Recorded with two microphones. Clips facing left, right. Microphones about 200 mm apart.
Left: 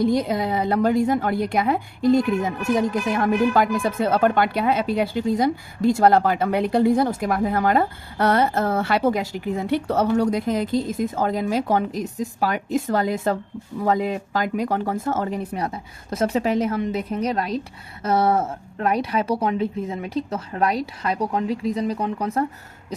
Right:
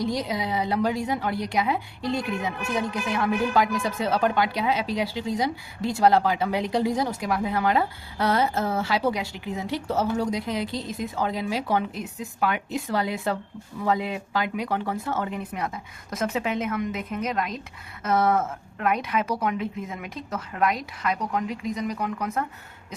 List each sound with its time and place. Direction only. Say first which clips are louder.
0.0 s a woman's voice: left 6 dB; 55° left (ahead or behind); by 22.4 s 30° left (ahead or behind)